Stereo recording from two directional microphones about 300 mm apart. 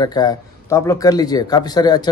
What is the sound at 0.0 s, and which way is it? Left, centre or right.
Speech, centre.